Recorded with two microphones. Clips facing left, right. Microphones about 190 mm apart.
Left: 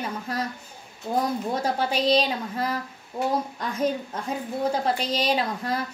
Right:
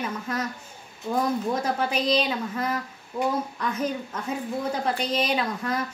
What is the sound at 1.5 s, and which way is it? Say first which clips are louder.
Speech: even; 30° left (ahead or behind).